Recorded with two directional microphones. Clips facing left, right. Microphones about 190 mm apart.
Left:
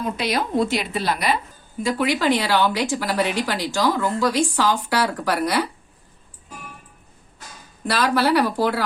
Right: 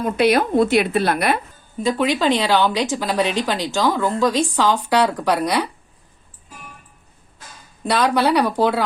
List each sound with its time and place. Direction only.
0.0 s a woman's voice: 55° right (ahead or behind)
1.8 s a woman's voice: 20° right (ahead or behind)
7.9 s a woman's voice: 20° right (ahead or behind)